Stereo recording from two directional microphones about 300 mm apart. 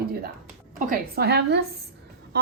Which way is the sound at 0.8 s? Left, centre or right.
Right.